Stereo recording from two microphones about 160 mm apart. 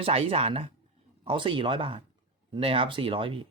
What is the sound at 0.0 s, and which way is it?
Speech, 35° right (ahead or behind).